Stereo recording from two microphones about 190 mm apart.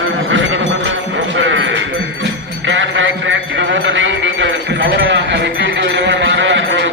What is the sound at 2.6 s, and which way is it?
Mantra, 80° right.